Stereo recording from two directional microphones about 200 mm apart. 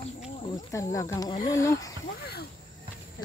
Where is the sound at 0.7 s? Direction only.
15° left (ahead or behind).